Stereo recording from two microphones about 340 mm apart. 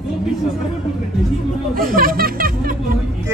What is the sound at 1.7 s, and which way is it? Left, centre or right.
Speech, right.